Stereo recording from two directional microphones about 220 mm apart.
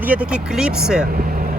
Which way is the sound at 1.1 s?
40° right (ahead or behind).